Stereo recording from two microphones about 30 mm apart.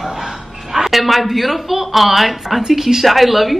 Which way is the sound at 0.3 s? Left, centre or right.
Centre.